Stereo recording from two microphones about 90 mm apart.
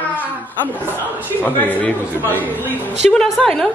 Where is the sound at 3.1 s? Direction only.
5° left (ahead or behind).